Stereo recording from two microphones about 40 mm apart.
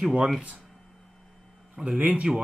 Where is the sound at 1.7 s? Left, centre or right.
Right.